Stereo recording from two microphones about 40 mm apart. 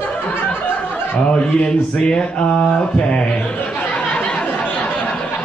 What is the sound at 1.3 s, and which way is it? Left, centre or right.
Mantra, left.